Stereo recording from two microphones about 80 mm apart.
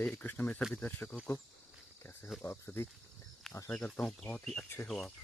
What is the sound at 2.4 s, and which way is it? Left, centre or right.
Speech, left.